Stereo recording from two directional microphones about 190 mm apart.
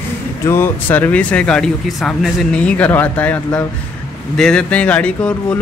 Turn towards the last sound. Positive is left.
turn(degrees=5)  # may be behind; listen again after turning